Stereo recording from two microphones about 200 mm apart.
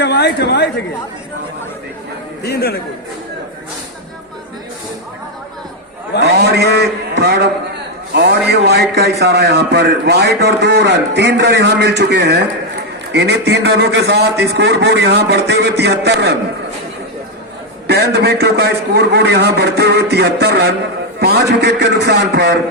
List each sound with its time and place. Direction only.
0.0 s a woman's voice: 55° left (ahead or behind)
2.4 s speech: 55° left (ahead or behind)
6.2 s a man's voice: 55° right (ahead or behind)
17.8 s a man's voice: 55° right (ahead or behind)